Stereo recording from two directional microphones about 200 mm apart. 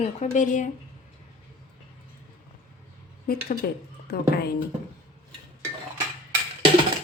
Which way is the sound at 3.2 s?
45° left (ahead or behind).